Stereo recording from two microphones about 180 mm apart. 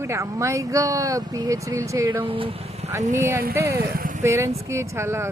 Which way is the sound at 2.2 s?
30° right (ahead or behind).